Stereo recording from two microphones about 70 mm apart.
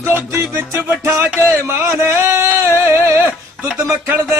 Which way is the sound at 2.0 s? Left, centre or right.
Right.